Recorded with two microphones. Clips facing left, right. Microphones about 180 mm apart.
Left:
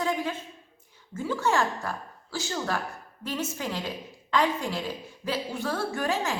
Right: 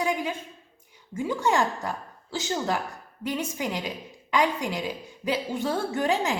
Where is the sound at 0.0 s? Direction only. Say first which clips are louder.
Right 1 dB; 15° right (ahead or behind).